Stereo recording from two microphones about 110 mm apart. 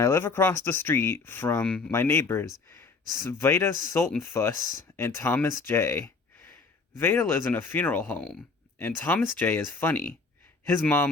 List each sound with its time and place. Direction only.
0.0 s speech: 25° left (ahead or behind)